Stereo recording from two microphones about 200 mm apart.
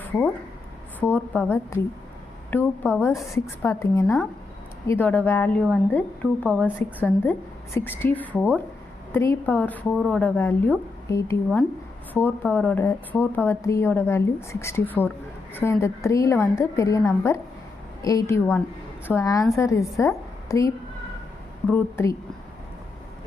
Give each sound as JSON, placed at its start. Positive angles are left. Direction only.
{"t": 0.9, "sound": "a woman's voice", "side_deg": 10}